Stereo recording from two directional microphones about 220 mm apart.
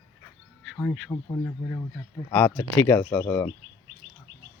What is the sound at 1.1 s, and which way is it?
Speech, 15° left (ahead or behind).